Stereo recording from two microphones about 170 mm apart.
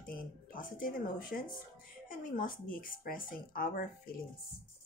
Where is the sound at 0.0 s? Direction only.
55° left (ahead or behind).